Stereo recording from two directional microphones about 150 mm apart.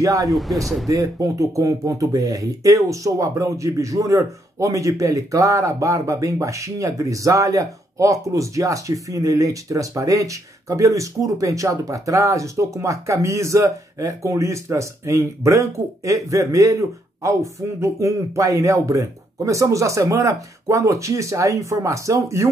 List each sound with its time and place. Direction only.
0.0 s speech: 20° right (ahead or behind)
0.3 s speech: centre (ahead or behind)
0.8 s speech: 20° right (ahead or behind)